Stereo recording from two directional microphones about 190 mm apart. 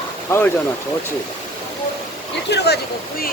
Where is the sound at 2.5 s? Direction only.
60° left (ahead or behind).